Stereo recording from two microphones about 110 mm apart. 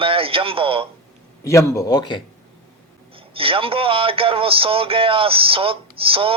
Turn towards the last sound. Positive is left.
turn(degrees=-55)  # may be behind; listen again after turning